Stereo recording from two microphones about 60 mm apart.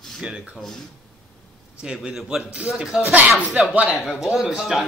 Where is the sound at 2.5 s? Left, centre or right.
Centre.